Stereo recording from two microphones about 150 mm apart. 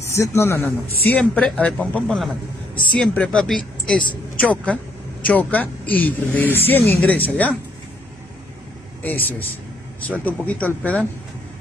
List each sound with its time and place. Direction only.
0.0 s a man's voice: 20° left (ahead or behind)
9.0 s a woman's voice: 10° left (ahead or behind)